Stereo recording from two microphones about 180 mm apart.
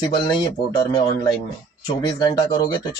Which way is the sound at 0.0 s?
25° left (ahead or behind).